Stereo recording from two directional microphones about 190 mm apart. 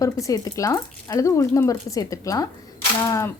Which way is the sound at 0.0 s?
15° left (ahead or behind).